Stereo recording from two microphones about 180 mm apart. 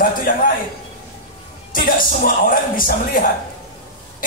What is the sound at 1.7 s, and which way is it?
Speech, 50° left (ahead or behind).